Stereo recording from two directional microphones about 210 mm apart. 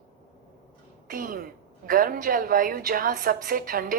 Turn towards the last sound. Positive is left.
turn(degrees=-40)  # may be behind; listen again after turning